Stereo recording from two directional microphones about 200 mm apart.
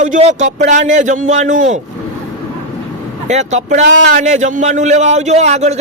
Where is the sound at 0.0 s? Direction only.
35° right (ahead or behind).